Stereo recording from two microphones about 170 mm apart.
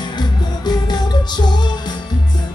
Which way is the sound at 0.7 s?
25° left (ahead or behind).